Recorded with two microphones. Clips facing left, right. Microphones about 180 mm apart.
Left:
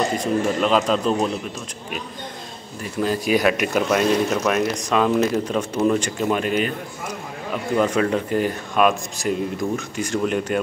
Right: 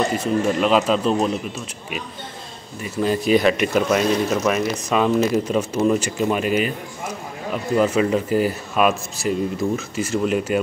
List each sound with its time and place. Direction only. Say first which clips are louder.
0.2 s speech: right 1 dB; 5° right (ahead or behind)
2.8 s speech: right 2 dB; centre (ahead or behind)